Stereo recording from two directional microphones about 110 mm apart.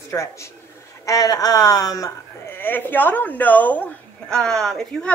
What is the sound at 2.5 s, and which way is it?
A woman's voice, 20° left (ahead or behind).